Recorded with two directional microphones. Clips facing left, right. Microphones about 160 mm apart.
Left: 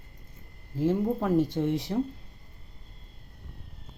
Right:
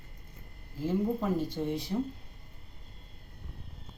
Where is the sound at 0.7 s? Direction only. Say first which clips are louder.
Left 4 dB; 65° left (ahead or behind).